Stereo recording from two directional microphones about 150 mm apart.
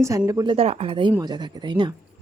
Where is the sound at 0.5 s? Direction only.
45° right (ahead or behind).